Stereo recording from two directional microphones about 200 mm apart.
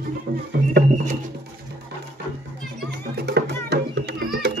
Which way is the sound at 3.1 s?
55° right (ahead or behind).